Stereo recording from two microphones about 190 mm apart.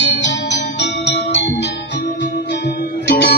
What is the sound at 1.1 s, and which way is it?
Music, 65° left (ahead or behind).